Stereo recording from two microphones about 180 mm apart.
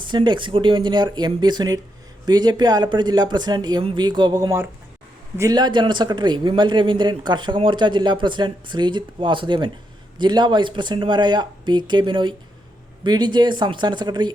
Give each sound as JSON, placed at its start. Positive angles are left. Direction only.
{"t": 0.0, "sound": "a man's voice", "side_deg": -25}